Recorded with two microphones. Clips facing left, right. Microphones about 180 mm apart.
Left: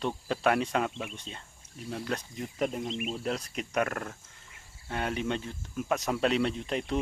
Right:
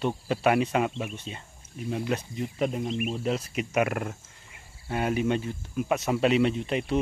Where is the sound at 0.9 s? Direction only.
20° right (ahead or behind).